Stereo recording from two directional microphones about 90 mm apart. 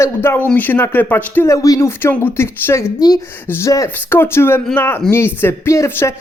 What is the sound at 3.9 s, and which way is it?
Speech, 20° left (ahead or behind).